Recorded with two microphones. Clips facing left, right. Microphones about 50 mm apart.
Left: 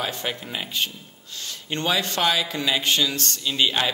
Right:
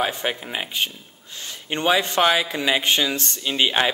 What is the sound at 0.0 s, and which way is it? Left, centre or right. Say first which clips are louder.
Speech: right 4 dB; right.